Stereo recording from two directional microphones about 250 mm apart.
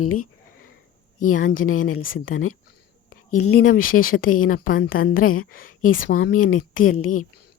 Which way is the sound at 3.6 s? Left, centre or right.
Left.